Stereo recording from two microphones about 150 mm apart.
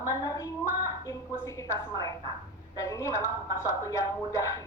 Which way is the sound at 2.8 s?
20° left (ahead or behind).